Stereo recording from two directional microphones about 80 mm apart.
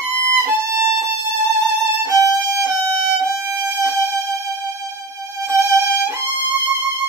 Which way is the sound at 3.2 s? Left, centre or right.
Right.